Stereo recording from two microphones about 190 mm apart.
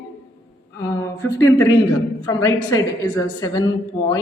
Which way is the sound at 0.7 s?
15° left (ahead or behind).